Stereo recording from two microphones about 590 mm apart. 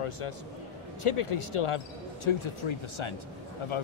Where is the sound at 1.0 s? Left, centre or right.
Left.